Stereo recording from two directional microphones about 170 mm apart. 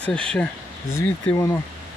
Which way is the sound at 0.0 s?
5° left (ahead or behind).